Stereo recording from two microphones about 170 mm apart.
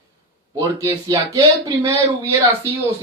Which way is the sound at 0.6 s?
20° right (ahead or behind).